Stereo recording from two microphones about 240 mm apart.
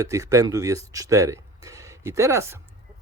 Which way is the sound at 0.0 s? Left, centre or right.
Centre.